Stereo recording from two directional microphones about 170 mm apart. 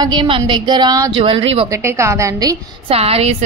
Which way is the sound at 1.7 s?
15° right (ahead or behind).